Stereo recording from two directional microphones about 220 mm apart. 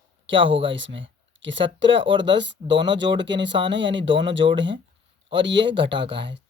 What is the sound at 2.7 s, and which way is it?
Speech, 20° right (ahead or behind).